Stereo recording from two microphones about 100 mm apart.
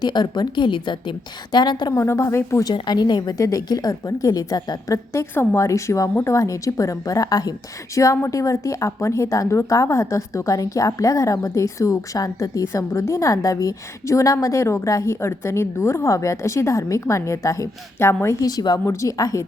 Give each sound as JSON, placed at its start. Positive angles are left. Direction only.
{"t": 0.0, "sound": "a woman's voice", "side_deg": 45}
{"t": 1.9, "sound": "a woman's voice", "side_deg": 30}
{"t": 2.7, "sound": "a woman's voice", "side_deg": 45}
{"t": 5.1, "sound": "a woman's voice", "side_deg": 25}
{"t": 18.3, "sound": "a woman's voice", "side_deg": 40}